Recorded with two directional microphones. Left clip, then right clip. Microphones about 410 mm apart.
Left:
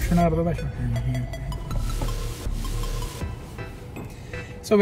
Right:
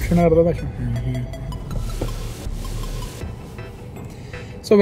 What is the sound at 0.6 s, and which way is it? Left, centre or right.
Speech, centre.